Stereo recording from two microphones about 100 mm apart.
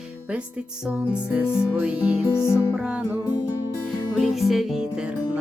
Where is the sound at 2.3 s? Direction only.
25° left (ahead or behind).